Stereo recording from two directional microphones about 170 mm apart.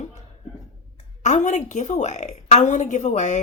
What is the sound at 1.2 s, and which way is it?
Speech, 45° left (ahead or behind).